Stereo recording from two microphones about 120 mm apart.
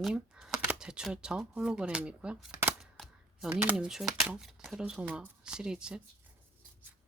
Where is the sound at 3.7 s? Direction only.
5° right (ahead or behind).